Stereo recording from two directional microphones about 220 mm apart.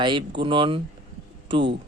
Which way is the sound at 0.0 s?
20° right (ahead or behind).